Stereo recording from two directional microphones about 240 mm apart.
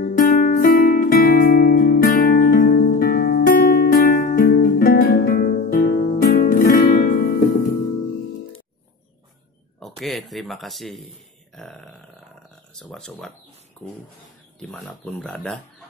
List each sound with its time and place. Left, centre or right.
0.0 s music: left
9.8 s a sound: centre
11.5 s burping: centre
12.7 s speech: centre
13.8 s a sound: centre
14.6 s speech: centre